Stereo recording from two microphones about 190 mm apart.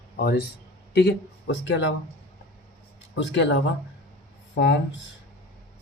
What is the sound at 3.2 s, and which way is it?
Speech, 70° left (ahead or behind).